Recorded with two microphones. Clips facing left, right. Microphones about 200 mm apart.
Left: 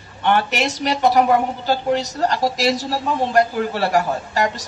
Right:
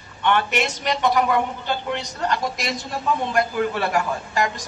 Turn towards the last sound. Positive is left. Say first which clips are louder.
# left 3 dB
turn(degrees=35)  # may be behind; listen again after turning